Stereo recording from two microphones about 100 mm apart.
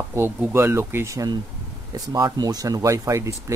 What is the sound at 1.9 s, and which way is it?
Speech, 40° right (ahead or behind).